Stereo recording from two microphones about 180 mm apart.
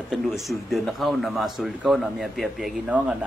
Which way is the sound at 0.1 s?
Centre (ahead or behind).